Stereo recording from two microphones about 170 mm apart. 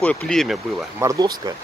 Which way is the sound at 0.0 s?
5° left (ahead or behind).